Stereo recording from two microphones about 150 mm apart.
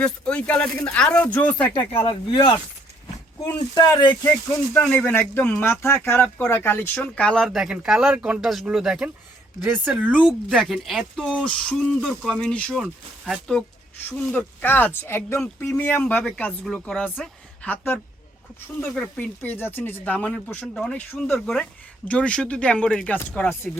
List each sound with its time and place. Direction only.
0.0 s speech: 10° left (ahead or behind)
2.0 s speech: 30° left (ahead or behind)
3.8 s speech: 30° left (ahead or behind)
4.2 s speech: 15° left (ahead or behind)
14.1 s speech: 10° left (ahead or behind)